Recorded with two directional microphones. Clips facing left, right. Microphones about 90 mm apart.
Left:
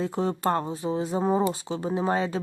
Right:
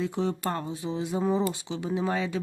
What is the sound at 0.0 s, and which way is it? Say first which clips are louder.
Speech: left 3 dB; 40° left (ahead or behind).